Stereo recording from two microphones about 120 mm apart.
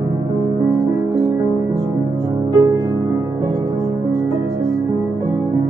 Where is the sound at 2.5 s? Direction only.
25° right (ahead or behind).